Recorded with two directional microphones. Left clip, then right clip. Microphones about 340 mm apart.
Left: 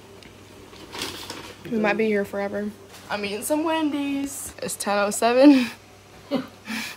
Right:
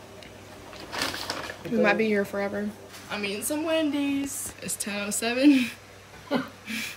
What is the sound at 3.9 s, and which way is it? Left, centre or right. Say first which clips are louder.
Speech: left 1 dB; centre.